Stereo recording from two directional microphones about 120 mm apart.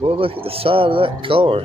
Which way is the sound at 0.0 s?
50° right (ahead or behind).